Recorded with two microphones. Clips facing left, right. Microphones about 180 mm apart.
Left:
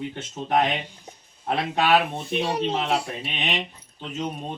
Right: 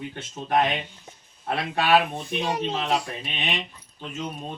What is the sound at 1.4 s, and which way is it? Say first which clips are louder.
Speech: left 1 dB; 20° left (ahead or behind).